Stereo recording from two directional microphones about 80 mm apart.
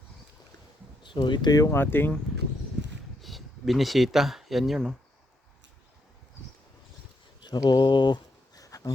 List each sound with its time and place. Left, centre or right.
1.0 s speech: left
1.7 s speech: left
3.2 s speech: centre
7.4 s a sound: left